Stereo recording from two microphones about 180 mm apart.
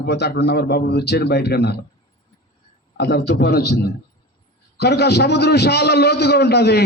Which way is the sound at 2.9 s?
65° left (ahead or behind).